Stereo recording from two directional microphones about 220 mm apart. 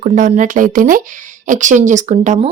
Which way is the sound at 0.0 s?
35° right (ahead or behind).